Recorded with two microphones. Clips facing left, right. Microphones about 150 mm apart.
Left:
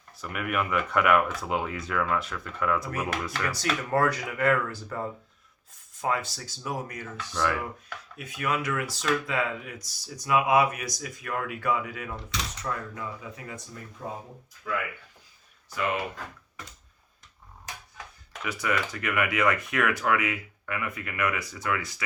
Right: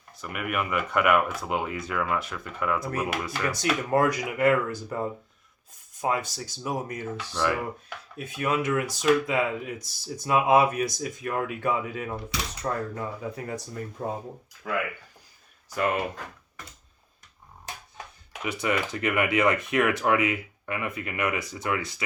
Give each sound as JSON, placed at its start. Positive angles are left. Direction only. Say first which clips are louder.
{"t": 0.2, "sound": "speech", "louder": "even", "side_deg": 0}
{"t": 3.4, "sound": "speech", "louder": "right 5 dB", "side_deg": -20}
{"t": 7.3, "sound": "speech", "louder": "right 1 dB", "side_deg": -10}
{"t": 8.1, "sound": "speech", "louder": "right 3 dB", "side_deg": -30}
{"t": 18.4, "sound": "speech", "louder": "right 2 dB", "side_deg": -25}